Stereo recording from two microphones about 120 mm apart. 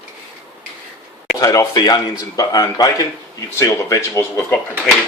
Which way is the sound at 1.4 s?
30° left (ahead or behind).